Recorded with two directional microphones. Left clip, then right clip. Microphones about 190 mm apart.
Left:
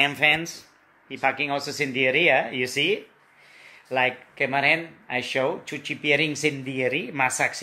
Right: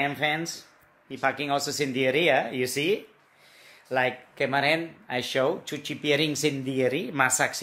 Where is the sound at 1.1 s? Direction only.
15° right (ahead or behind).